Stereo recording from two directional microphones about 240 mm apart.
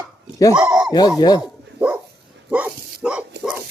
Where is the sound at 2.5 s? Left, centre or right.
Centre.